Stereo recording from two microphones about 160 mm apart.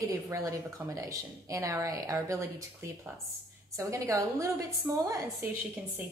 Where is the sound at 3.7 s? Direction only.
20° right (ahead or behind).